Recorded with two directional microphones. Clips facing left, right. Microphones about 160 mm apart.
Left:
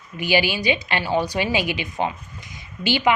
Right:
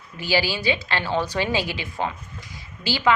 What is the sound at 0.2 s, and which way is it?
A woman's voice, 15° left (ahead or behind).